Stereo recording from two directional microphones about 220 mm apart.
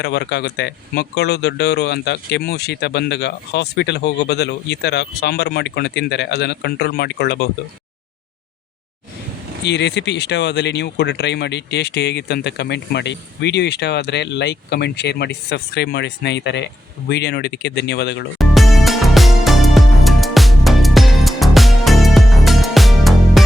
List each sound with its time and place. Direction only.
0.0 s speech: 50° left (ahead or behind)
9.6 s speech: 50° left (ahead or behind)
18.3 s music: centre (ahead or behind)